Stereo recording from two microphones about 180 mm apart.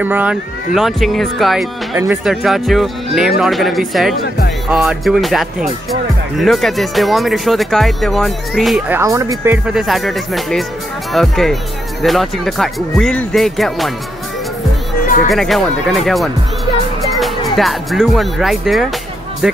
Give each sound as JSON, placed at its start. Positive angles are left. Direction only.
{"t": 0.0, "sound": "speech", "side_deg": -10}
{"t": 15.2, "sound": "speech", "side_deg": 0}
{"t": 17.6, "sound": "speech", "side_deg": 0}